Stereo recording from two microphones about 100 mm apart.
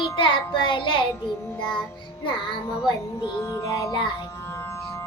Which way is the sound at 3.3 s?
30° left (ahead or behind).